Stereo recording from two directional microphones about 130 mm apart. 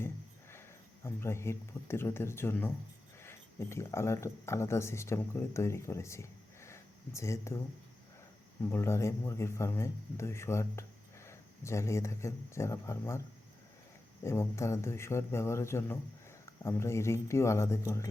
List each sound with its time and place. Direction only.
1.0 s speech: 20° left (ahead or behind)
8.7 s speech: 20° left (ahead or behind)
14.3 s speech: 20° left (ahead or behind)